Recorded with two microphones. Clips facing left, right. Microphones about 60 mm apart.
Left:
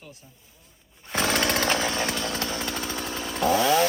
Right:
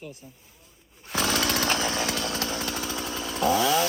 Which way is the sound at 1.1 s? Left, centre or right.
Left.